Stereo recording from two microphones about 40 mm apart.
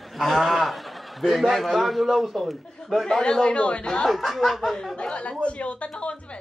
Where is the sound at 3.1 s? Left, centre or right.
Centre.